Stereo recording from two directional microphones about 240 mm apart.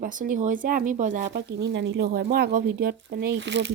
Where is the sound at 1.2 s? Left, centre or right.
Right.